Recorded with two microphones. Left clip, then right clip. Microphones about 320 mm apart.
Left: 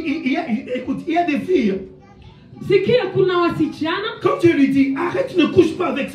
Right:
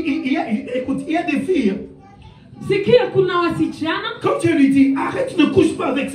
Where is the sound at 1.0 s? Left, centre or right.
Centre.